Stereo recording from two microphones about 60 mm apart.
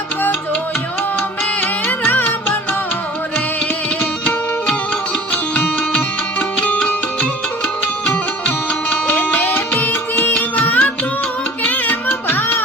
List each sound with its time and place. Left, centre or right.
2.0 s music: left
5.3 s music: left
8.4 s music: left